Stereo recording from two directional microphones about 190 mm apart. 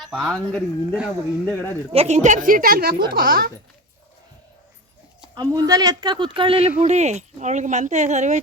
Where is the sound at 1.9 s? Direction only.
35° right (ahead or behind); by 3.5 s 50° right (ahead or behind).